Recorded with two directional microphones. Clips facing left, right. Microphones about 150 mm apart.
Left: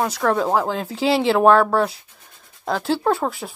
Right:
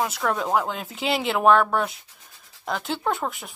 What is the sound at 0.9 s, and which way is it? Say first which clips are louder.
Speech: left 7 dB; 30° left (ahead or behind).